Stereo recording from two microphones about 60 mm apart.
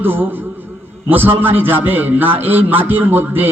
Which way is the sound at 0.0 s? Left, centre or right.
Right.